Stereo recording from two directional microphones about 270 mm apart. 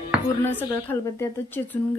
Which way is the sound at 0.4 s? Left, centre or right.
Centre.